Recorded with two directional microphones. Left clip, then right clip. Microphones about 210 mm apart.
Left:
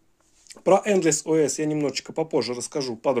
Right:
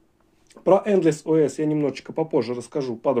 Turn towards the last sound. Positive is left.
turn(degrees=30)  # may be behind; listen again after turning